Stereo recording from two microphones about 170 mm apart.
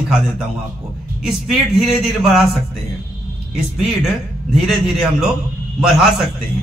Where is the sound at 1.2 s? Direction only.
Centre (ahead or behind).